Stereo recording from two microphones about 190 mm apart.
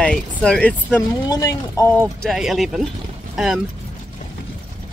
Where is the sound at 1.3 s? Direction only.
15° left (ahead or behind).